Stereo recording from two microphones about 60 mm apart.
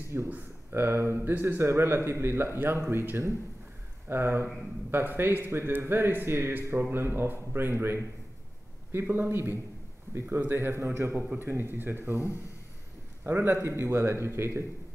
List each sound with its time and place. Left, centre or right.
0.1 s a man's voice: right
13.5 s a man's voice: right